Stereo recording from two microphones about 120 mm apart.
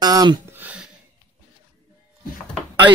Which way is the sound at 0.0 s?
35° right (ahead or behind).